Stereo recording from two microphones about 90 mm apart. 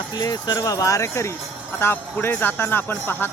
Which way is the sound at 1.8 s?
20° left (ahead or behind).